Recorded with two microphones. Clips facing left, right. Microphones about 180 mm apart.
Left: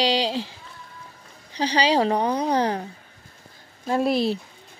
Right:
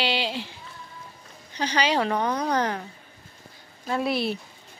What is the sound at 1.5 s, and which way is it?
A woman's voice, 35° left (ahead or behind).